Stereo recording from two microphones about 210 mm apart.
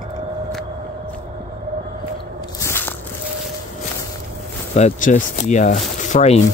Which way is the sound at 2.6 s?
10° left (ahead or behind).